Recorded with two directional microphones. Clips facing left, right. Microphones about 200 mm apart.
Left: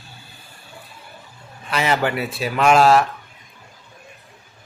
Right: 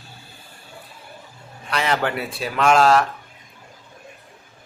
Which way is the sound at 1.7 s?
5° left (ahead or behind).